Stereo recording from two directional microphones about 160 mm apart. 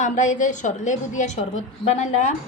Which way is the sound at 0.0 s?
50° left (ahead or behind).